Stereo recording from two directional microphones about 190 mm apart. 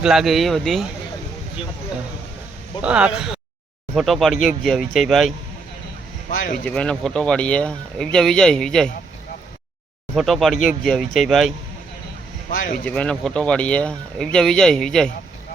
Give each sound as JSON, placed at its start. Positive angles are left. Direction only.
{"t": 0.0, "sound": "speech", "side_deg": 0}
{"t": 2.8, "sound": "speech", "side_deg": -5}
{"t": 3.2, "sound": "a sound", "side_deg": -5}
{"t": 3.9, "sound": "speech", "side_deg": 0}
{"t": 6.3, "sound": "speech", "side_deg": 45}
{"t": 6.7, "sound": "speech", "side_deg": 5}
{"t": 10.2, "sound": "speech", "side_deg": 0}
{"t": 12.5, "sound": "speech", "side_deg": 45}
{"t": 12.8, "sound": "speech", "side_deg": 5}